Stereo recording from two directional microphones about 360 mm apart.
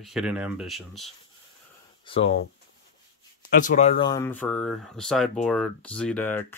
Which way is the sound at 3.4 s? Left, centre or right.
Left.